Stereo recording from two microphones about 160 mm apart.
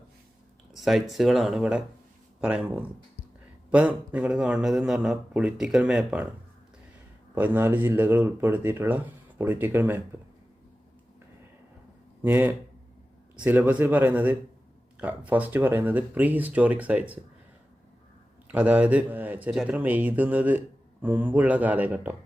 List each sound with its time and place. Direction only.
0.7 s a man's voice: centre (ahead or behind)
7.3 s speech: 10° right (ahead or behind)
12.2 s speech: 10° right (ahead or behind)
18.4 s speech: 10° right (ahead or behind)